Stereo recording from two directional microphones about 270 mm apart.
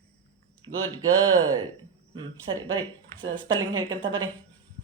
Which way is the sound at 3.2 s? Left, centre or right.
Centre.